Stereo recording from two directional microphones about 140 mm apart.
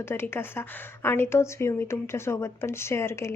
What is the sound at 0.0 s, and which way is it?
A woman's voice, 15° left (ahead or behind).